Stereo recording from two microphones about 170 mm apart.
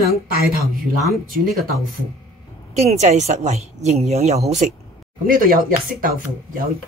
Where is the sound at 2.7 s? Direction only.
40° right (ahead or behind).